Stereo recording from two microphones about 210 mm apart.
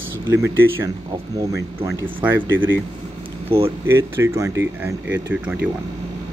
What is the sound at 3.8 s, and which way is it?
Speech, 10° right (ahead or behind).